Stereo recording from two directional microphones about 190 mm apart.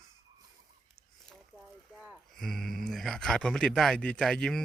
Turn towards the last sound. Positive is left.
turn(degrees=5)  # may be behind; listen again after turning